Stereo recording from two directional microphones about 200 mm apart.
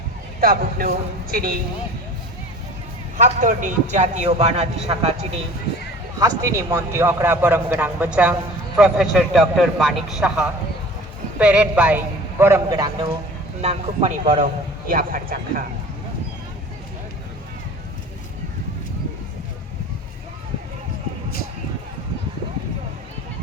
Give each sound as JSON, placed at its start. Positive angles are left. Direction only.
{"t": 0.3, "sound": "a man's voice", "side_deg": -45}
{"t": 3.2, "sound": "a man's voice", "side_deg": -40}
{"t": 6.1, "sound": "a man's voice", "side_deg": -15}
{"t": 13.6, "sound": "a man's voice", "side_deg": -30}
{"t": 14.8, "sound": "a man's voice", "side_deg": -45}